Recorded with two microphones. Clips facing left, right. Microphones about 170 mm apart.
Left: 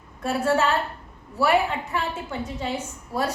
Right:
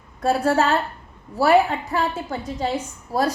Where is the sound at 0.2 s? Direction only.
35° right (ahead or behind).